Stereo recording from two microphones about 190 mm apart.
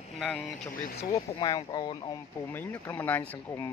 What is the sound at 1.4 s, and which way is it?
Speech, 20° left (ahead or behind).